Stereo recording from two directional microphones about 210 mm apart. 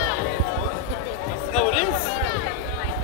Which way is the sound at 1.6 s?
30° left (ahead or behind).